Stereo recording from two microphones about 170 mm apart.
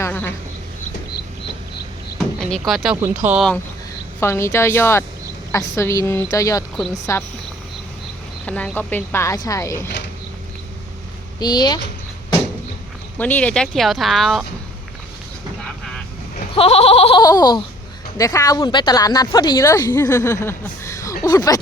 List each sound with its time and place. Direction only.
0.0 s a sound: 10° left (ahead or behind)
2.1 s a sound: centre (ahead or behind)
3.0 s speech: 10° right (ahead or behind)
4.2 s speech: 15° left (ahead or behind)
8.4 s speech: 10° left (ahead or behind)
11.3 s speech: 25° left (ahead or behind)
13.1 s speech: 10° left (ahead or behind)
16.6 s bleat: 35° left (ahead or behind)
17.2 s speech: 20° left (ahead or behind)